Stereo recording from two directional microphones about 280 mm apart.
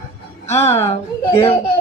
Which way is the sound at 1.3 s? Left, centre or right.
Left.